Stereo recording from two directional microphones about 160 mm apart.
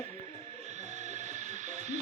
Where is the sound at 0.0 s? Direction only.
50° right (ahead or behind).